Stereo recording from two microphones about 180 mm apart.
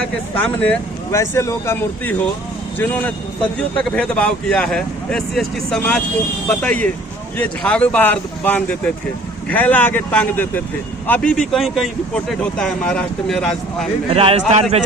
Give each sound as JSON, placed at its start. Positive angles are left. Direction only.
{"t": 0.0, "sound": "speech", "side_deg": 10}
{"t": 14.1, "sound": "a man's voice", "side_deg": -35}